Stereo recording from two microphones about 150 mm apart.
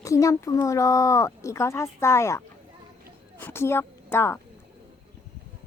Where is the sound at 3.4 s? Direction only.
15° left (ahead or behind).